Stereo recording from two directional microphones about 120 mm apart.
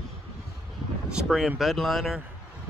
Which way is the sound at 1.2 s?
5° right (ahead or behind).